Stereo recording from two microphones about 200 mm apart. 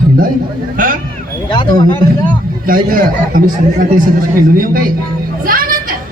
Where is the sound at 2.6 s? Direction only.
45° right (ahead or behind).